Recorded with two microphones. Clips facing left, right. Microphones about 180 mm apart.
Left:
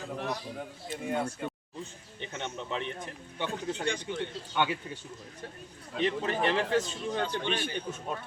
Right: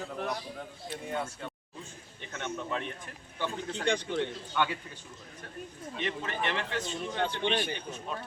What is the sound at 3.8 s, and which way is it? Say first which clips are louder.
Speech: right 6 dB; 60° right (ahead or behind).